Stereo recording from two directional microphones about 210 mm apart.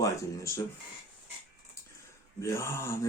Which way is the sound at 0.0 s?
15° left (ahead or behind).